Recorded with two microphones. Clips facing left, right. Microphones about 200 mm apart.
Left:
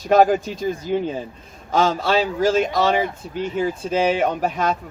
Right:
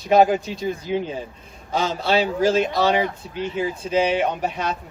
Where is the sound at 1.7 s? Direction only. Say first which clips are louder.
Left 2 dB; 45° left (ahead or behind).